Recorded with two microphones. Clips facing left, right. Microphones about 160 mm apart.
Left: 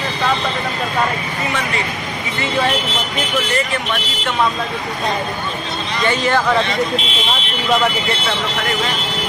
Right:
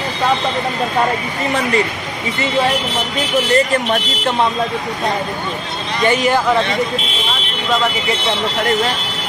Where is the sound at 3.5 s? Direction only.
40° right (ahead or behind).